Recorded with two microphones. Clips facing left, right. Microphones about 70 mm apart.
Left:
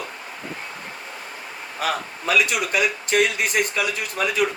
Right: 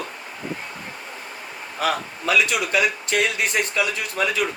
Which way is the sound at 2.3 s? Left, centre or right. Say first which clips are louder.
Even; centre.